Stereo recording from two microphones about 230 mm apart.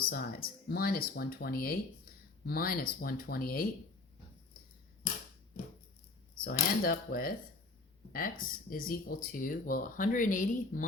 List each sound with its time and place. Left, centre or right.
0.1 s speech: left
6.3 s speech: left